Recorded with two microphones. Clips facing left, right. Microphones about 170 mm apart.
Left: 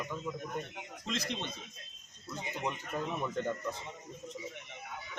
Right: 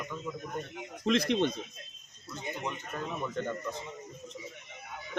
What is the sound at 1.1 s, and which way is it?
Speech, 60° right (ahead or behind).